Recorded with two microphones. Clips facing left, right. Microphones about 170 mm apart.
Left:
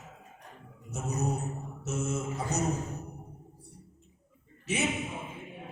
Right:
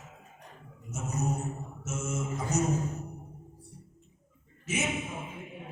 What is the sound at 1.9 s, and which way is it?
Music, 35° left (ahead or behind).